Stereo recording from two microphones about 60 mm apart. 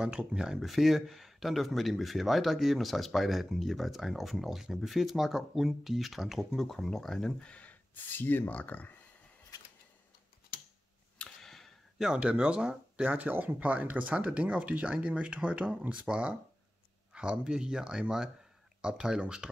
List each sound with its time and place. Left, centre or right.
0.0 s speech: centre
0.6 s speech: centre
7.9 s speech: left
11.4 s a sound: centre
12.0 s speech: centre
13.1 s speech: right; by 19.5 s centre